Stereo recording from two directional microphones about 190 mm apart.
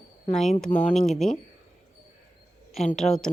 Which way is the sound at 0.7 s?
5° left (ahead or behind).